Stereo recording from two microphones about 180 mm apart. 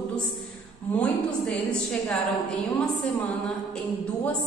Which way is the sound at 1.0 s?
5° left (ahead or behind).